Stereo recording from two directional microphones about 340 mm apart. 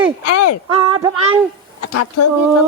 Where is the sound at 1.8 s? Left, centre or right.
Left.